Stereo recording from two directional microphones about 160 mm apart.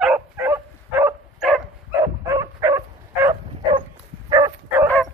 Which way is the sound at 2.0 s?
20° right (ahead or behind).